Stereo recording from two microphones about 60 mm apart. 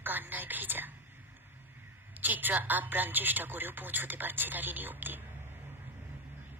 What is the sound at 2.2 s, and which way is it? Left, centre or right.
Speech, right.